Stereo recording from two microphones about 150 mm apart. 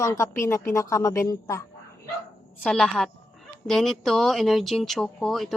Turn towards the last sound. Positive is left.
turn(degrees=0)  # may be behind; listen again after turning